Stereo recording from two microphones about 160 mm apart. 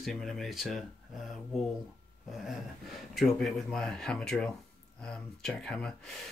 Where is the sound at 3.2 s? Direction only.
Centre (ahead or behind).